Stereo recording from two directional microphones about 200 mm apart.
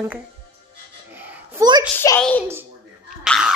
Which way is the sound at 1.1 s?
10° right (ahead or behind).